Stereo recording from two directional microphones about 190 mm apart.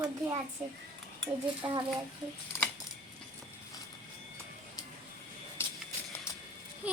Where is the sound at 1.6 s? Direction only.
20° right (ahead or behind).